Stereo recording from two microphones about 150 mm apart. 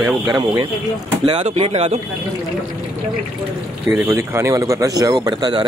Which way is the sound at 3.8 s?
5° right (ahead or behind).